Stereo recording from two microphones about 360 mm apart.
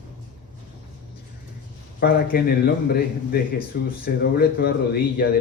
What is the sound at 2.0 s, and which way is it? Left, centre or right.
Speech, left.